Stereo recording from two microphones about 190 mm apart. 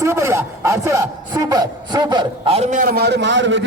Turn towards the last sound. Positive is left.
turn(degrees=-70)  # may be behind; listen again after turning